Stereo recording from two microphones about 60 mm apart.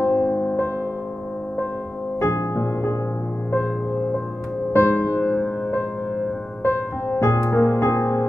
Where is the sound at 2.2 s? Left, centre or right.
Left.